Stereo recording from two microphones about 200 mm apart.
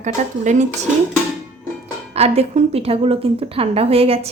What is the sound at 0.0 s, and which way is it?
Speech, 35° right (ahead or behind).